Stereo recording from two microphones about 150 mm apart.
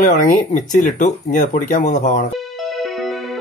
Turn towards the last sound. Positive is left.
turn(degrees=0)  # may be behind; listen again after turning